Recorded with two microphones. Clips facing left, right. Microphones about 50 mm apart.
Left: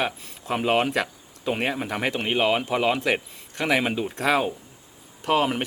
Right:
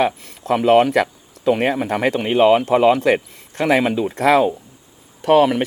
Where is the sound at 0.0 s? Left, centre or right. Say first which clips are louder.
Right 8 dB; right.